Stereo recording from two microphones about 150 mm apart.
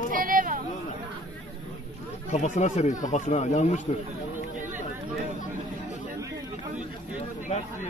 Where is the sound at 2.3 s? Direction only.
50° left (ahead or behind).